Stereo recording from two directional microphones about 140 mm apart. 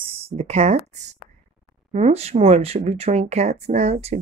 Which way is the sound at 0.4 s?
50° right (ahead or behind).